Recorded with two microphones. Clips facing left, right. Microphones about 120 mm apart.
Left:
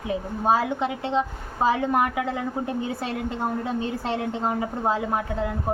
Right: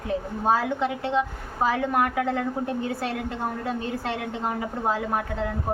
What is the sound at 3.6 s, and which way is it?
A woman's voice, 25° left (ahead or behind).